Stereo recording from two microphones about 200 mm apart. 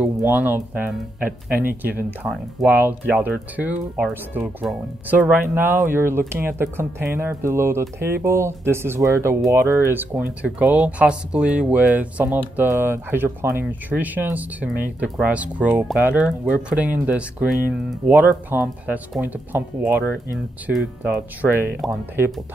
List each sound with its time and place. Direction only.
0.0 s speech: 10° right (ahead or behind)